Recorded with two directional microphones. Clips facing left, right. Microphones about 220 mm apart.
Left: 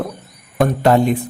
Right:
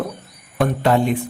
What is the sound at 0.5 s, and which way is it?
Speech, 40° left (ahead or behind).